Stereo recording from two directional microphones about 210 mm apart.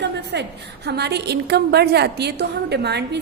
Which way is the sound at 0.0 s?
55° right (ahead or behind).